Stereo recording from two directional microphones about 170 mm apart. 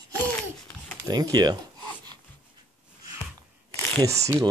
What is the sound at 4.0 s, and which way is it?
Speech, 20° right (ahead or behind).